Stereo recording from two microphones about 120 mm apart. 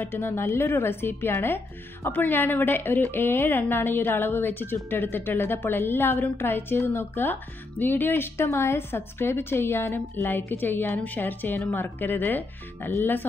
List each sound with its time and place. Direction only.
0.0 s a woman's voice: 20° left (ahead or behind)